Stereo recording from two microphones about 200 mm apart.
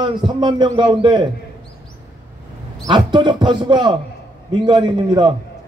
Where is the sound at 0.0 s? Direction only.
20° right (ahead or behind).